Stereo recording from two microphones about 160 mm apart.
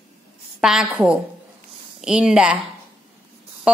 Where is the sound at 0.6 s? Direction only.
5° right (ahead or behind).